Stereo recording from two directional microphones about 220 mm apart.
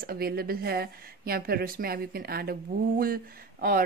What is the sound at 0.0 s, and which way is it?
A woman's voice, 45° right (ahead or behind).